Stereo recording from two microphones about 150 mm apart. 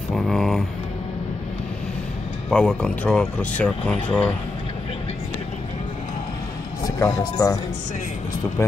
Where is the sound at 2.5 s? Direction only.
5° left (ahead or behind).